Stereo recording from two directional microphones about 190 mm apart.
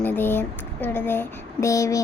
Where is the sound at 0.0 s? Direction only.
10° left (ahead or behind).